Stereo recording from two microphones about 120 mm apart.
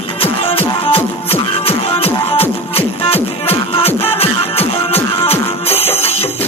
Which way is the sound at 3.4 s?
55° left (ahead or behind).